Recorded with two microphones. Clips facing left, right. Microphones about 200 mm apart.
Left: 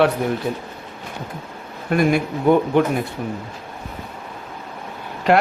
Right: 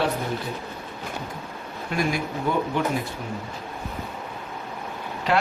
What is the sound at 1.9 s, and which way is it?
Speech, 55° left (ahead or behind).